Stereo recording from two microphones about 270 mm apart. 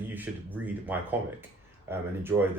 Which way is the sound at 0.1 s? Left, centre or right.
Centre.